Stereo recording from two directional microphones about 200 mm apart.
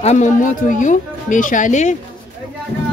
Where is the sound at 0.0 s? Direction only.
35° left (ahead or behind).